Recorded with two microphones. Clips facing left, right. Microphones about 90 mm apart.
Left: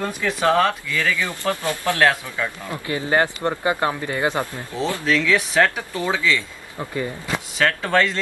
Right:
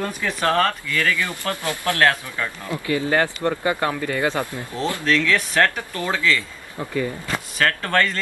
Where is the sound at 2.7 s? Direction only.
25° left (ahead or behind).